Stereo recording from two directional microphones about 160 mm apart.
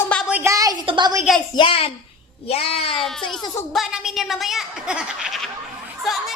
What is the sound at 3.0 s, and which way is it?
A woman's voice, centre (ahead or behind).